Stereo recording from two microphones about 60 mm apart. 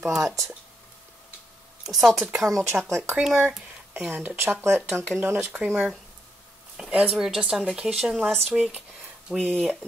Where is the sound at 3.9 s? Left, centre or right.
Right.